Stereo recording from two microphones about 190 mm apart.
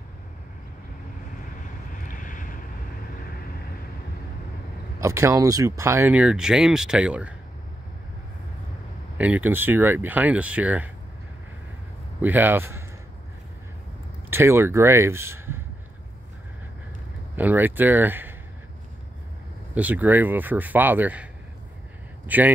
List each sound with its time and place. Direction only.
1.9 s vehicle: 45° left (ahead or behind)
5.0 s speech: 15° right (ahead or behind)
9.2 s speech: 10° right (ahead or behind)
12.2 s speech: 10° right (ahead or behind)
14.3 s speech: 15° right (ahead or behind)
17.4 s speech: 10° right (ahead or behind)
19.7 s a man's voice: 10° right (ahead or behind)